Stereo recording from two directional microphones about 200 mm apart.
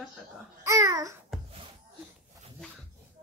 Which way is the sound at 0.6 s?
15° right (ahead or behind).